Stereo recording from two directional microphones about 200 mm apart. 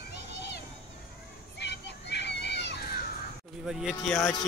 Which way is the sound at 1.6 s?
60° left (ahead or behind).